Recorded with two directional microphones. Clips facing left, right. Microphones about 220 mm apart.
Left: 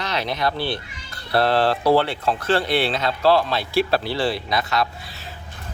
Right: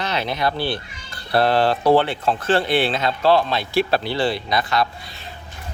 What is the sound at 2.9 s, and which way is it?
Speech, 25° right (ahead or behind).